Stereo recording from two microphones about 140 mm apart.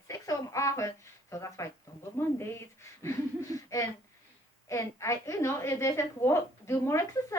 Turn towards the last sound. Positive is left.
turn(degrees=20)  # may be behind; listen again after turning